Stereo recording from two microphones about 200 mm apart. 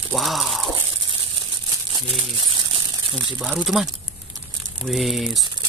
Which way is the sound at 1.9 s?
25° right (ahead or behind).